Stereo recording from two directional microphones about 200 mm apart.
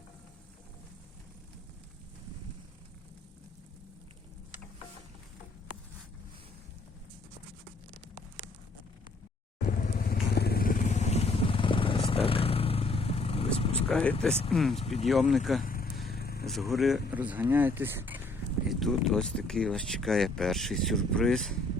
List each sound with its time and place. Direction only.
9.6 s vehicle: 40° left (ahead or behind)
13.7 s speech: 5° left (ahead or behind)
14.8 s speech: 30° left (ahead or behind)
15.0 s speech: centre (ahead or behind)
15.6 s vehicle: 45° left (ahead or behind)
16.5 s speech: centre (ahead or behind)
18.8 s speech: centre (ahead or behind)